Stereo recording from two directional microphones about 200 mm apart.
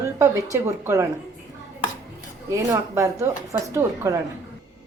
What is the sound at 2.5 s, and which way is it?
A woman's voice, 15° right (ahead or behind).